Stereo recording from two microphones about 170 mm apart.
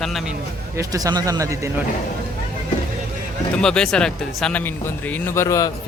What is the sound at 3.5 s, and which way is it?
Speech, 5° left (ahead or behind).